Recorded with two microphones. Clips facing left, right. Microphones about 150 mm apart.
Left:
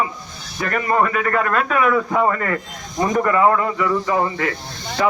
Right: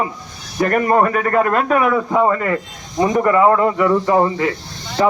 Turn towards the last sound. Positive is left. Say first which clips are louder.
# right 3 dB
turn(degrees=-30)  # may be behind; listen again after turning